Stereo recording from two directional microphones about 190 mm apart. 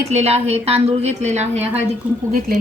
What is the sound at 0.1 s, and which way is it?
A woman's voice, 35° right (ahead or behind).